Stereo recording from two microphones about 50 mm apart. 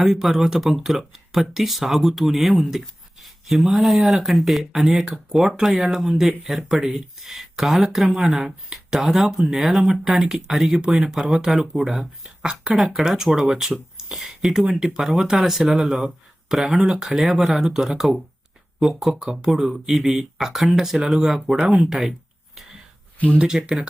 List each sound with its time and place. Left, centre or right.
0.0 s speech: centre
23.1 s speech: left
23.4 s speech: centre